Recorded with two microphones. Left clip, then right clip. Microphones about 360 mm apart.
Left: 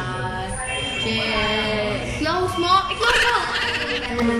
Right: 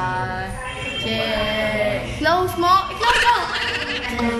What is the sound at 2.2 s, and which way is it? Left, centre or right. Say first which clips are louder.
Speech: right 4 dB; centre.